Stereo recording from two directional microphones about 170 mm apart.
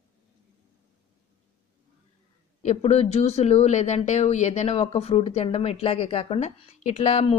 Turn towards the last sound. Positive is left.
turn(degrees=40)  # may be behind; listen again after turning